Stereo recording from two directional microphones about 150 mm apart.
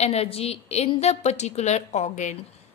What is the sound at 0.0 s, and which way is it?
A woman's voice, 45° left (ahead or behind).